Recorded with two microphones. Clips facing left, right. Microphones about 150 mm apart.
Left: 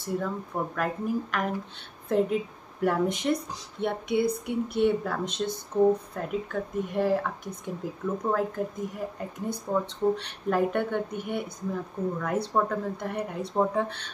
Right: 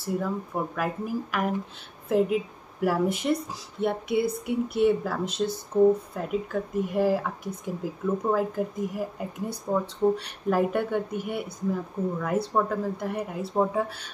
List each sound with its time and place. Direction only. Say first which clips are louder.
0.0 s speech: right 2 dB; 5° right (ahead or behind)